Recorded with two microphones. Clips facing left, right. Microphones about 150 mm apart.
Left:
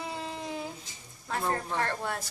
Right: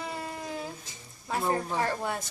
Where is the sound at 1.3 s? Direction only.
10° right (ahead or behind).